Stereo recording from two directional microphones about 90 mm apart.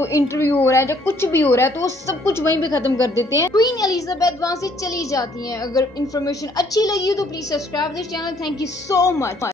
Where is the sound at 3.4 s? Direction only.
45° left (ahead or behind).